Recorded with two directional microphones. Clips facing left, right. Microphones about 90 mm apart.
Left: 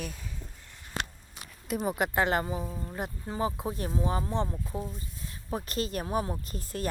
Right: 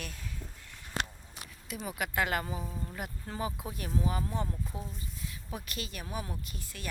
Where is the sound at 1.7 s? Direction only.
45° left (ahead or behind).